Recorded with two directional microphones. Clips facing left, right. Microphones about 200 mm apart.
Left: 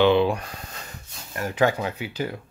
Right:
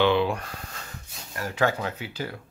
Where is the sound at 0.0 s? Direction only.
20° left (ahead or behind).